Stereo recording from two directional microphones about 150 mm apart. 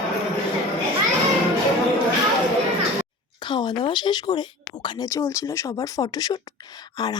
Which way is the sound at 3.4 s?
30° left (ahead or behind).